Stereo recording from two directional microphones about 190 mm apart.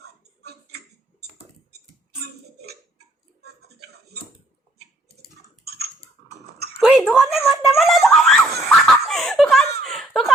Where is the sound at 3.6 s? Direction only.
60° right (ahead or behind).